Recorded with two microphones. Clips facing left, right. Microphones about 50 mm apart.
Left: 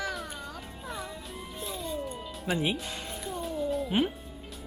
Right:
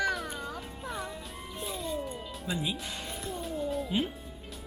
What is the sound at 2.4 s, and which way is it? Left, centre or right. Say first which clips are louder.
Speech: left 5 dB; left.